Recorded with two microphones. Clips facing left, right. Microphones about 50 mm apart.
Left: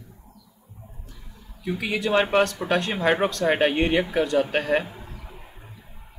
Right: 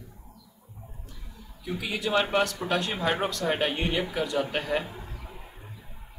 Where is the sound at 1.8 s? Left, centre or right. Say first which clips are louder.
Left 4 dB; left.